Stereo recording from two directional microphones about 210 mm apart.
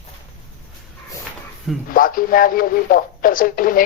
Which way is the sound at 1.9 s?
40° left (ahead or behind).